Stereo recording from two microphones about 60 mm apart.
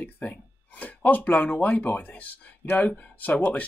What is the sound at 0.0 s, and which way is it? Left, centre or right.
Speech, left.